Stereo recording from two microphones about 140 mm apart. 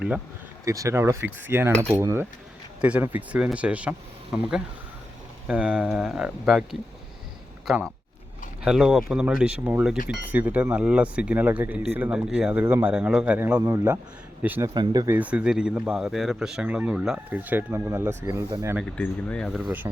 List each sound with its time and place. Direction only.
0.6 s speech: 25° right (ahead or behind); by 6.7 s 5° right (ahead or behind)
8.6 s speech: 5° right (ahead or behind)
14.7 s speech: 30° right (ahead or behind)
15.0 s speech: 10° right (ahead or behind)
18.8 s speech: 5° left (ahead or behind)